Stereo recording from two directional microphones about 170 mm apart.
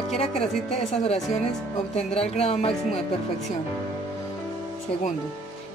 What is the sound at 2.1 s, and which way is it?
Speech, 35° left (ahead or behind).